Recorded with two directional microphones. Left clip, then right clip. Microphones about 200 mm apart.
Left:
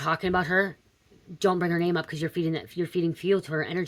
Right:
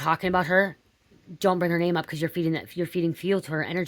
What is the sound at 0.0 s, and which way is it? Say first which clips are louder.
Speech: right 2 dB; 35° right (ahead or behind).